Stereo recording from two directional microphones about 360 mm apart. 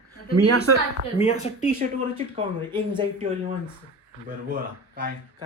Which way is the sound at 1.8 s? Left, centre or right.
Centre.